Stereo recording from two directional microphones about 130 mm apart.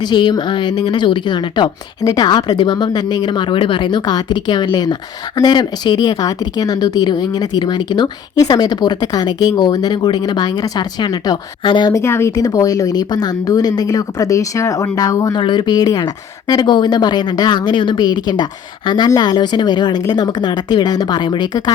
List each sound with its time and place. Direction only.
0.0 s speech: 35° left (ahead or behind)
11.9 s a woman's voice: 20° left (ahead or behind); by 21.6 s 35° left (ahead or behind)